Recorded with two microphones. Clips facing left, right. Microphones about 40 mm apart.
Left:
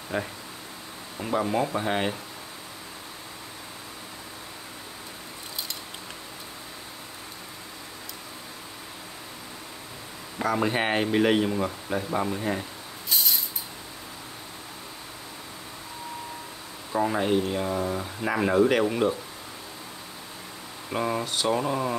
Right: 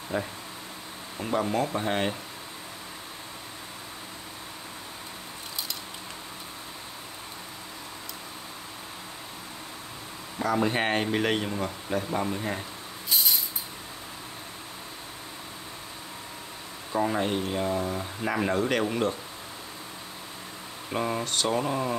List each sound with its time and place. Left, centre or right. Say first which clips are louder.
0.1 s speech: left 1 dB; left
1.1 s speech: left 1 dB; centre
10.4 s speech: left 1 dB; centre
13.1 s a sound: even; centre
16.9 s speech: left 2 dB; centre
20.9 s speech: left 1 dB; centre